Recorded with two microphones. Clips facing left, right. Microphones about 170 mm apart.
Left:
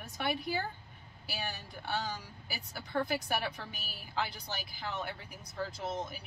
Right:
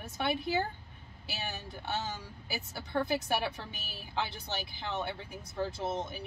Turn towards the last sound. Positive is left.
turn(degrees=-25)  # may be behind; listen again after turning